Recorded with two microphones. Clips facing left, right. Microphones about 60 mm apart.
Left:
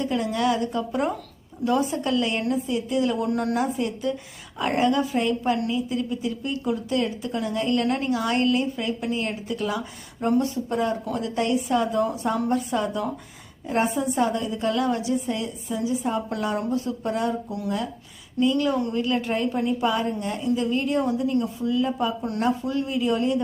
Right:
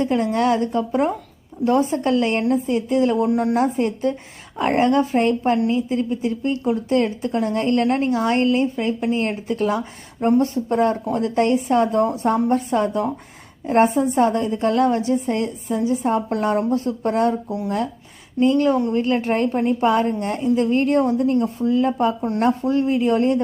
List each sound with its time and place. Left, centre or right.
0.0 s speech: right
3.2 s a woman's voice: right
3.6 s speech: right
5.4 s a woman's voice: right
18.3 s a woman's voice: right